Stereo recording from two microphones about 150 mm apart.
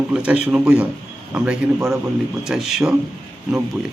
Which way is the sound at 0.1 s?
10° right (ahead or behind).